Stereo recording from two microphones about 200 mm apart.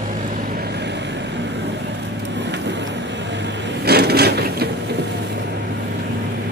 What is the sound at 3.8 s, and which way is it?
Wood, 55° right (ahead or behind).